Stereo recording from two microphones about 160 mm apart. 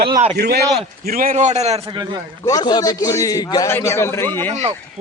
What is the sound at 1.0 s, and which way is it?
Speech, 60° right (ahead or behind).